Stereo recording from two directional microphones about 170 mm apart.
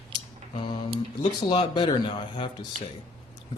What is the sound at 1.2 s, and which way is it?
Speech, 25° left (ahead or behind).